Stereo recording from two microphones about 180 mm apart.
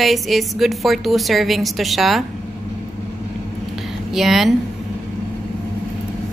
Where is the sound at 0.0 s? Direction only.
Centre (ahead or behind).